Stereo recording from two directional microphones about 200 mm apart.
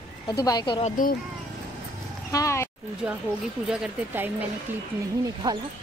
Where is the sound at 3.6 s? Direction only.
5° right (ahead or behind).